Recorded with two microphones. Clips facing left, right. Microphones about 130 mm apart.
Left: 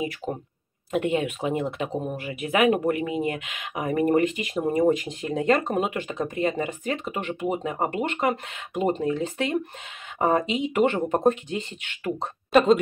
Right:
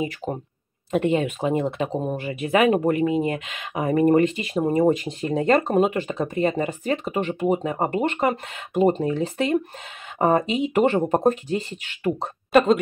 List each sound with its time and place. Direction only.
1.1 s speech: 30° right (ahead or behind)
12.5 s a woman's voice: centre (ahead or behind)